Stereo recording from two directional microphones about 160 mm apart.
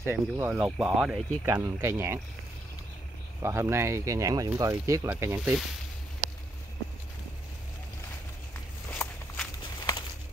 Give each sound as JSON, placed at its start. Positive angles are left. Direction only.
{"t": 0.0, "sound": "speech", "side_deg": -10}
{"t": 1.4, "sound": "speech", "side_deg": -20}
{"t": 3.4, "sound": "speech", "side_deg": -15}
{"t": 8.9, "sound": "walk", "side_deg": 10}
{"t": 9.8, "sound": "a sound", "side_deg": 20}